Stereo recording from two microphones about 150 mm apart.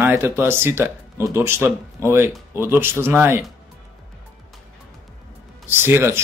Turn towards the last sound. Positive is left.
turn(degrees=-15)  # may be behind; listen again after turning